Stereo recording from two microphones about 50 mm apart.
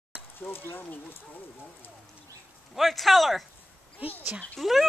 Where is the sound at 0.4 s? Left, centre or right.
Left.